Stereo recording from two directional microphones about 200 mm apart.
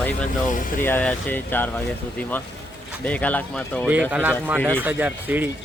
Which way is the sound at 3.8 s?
10° right (ahead or behind).